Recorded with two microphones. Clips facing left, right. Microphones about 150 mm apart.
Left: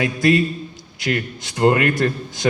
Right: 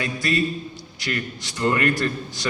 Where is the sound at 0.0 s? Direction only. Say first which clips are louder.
Left 7 dB; 55° left (ahead or behind).